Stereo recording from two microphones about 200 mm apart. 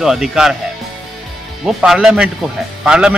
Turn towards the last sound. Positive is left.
turn(degrees=-5)  # may be behind; listen again after turning